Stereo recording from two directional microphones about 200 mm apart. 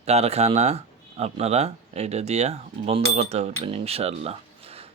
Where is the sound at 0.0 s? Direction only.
30° right (ahead or behind).